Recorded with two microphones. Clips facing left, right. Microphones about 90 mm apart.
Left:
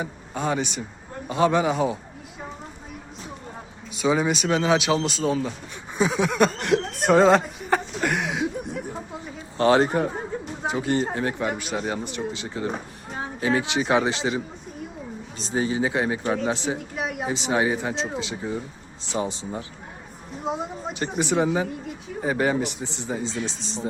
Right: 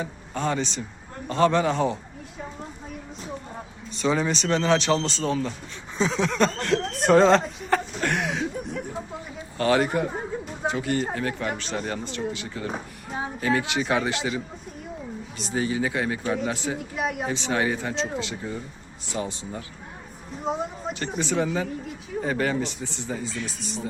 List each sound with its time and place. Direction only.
0.0 s speech: 15° left (ahead or behind)
3.9 s speech: 10° left (ahead or behind)
6.9 s speech: 5° left (ahead or behind)
7.9 s a sound: centre (ahead or behind)
9.6 s speech: 30° left (ahead or behind)
11.4 s speech: 10° left (ahead or behind)
12.0 s speech: 20° left (ahead or behind)
16.7 s speech: centre (ahead or behind)
17.2 s speech: 20° left (ahead or behind)
20.4 s speech: 5° left (ahead or behind)
20.9 s speech: 20° left (ahead or behind)